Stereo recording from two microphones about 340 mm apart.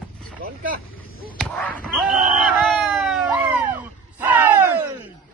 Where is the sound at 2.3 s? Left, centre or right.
Centre.